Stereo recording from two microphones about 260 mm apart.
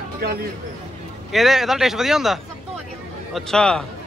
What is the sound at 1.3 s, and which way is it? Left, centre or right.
Speech, centre.